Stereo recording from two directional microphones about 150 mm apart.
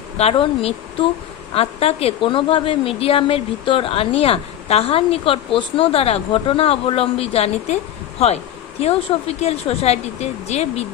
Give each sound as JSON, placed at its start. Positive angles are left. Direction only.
{"t": 0.2, "sound": "a woman's voice", "side_deg": 40}
{"t": 8.8, "sound": "speech", "side_deg": 40}